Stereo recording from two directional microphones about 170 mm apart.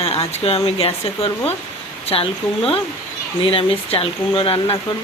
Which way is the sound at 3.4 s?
30° left (ahead or behind).